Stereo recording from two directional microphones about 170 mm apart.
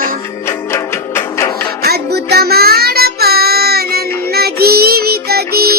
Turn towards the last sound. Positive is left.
turn(degrees=-65)  # may be behind; listen again after turning